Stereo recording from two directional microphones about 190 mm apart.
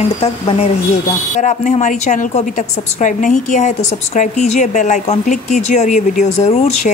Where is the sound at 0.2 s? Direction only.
30° left (ahead or behind).